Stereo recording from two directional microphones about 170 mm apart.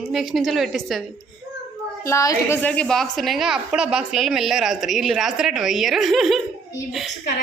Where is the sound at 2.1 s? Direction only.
15° left (ahead or behind); by 6.4 s centre (ahead or behind).